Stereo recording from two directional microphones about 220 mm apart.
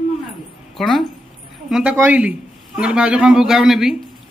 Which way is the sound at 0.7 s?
Centre (ahead or behind).